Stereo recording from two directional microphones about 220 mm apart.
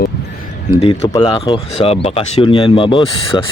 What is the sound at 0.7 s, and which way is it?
Speech, 25° left (ahead or behind).